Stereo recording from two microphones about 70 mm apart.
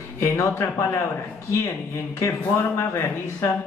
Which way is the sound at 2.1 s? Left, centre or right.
Left.